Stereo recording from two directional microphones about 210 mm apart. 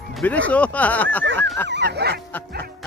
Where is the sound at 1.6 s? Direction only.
55° right (ahead or behind).